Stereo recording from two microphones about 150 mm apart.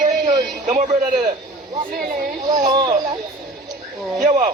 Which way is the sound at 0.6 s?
55° right (ahead or behind).